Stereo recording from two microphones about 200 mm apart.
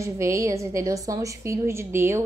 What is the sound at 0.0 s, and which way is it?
Speech, 15° right (ahead or behind).